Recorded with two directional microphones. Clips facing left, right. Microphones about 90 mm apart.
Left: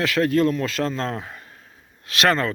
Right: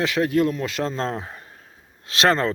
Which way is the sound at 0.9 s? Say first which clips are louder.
Right 1 dB; 30° right (ahead or behind).